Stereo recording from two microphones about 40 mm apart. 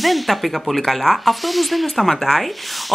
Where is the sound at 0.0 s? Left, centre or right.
Centre.